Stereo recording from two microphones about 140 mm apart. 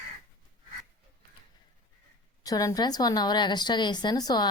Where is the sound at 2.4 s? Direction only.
25° left (ahead or behind).